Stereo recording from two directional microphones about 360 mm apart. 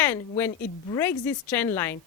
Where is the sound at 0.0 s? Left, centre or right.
Centre.